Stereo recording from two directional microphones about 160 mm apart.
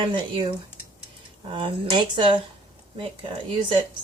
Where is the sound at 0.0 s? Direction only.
30° right (ahead or behind).